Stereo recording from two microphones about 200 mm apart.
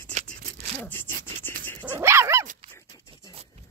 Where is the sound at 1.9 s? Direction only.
15° right (ahead or behind).